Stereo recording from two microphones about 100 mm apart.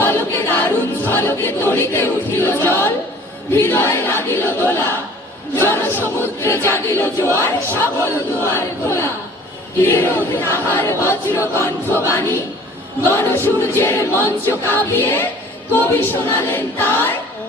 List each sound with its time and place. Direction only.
0.0 s a capella: 20° left (ahead or behind)
3.5 s choir: 25° left (ahead or behind)